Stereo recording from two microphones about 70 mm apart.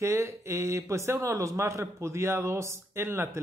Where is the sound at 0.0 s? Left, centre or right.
Right.